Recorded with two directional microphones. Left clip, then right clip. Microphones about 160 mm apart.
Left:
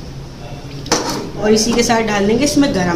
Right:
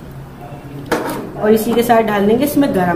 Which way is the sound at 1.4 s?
25° right (ahead or behind).